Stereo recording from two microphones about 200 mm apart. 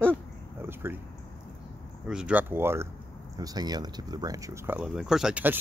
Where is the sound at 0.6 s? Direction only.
10° right (ahead or behind).